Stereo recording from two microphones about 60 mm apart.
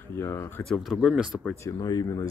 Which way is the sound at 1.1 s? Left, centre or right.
Centre.